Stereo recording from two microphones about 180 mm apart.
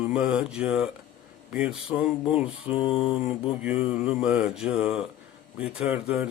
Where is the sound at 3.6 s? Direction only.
5° right (ahead or behind).